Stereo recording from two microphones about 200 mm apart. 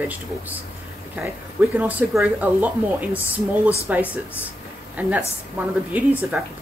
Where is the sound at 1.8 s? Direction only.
10° right (ahead or behind).